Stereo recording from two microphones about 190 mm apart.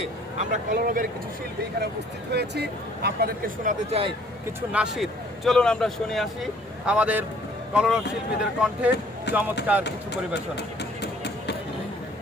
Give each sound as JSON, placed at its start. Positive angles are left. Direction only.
{"t": 0.3, "sound": "speech", "side_deg": -40}
{"t": 2.3, "sound": "speech", "side_deg": -60}
{"t": 4.7, "sound": "a man's voice", "side_deg": -5}
{"t": 10.5, "sound": "a sound", "side_deg": 60}